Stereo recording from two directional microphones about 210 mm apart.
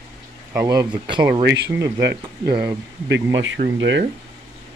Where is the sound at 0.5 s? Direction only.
15° right (ahead or behind).